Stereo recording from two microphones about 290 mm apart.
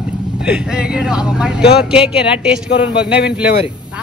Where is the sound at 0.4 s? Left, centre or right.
Centre.